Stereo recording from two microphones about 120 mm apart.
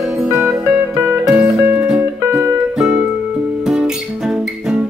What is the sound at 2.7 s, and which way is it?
Music, 5° right (ahead or behind).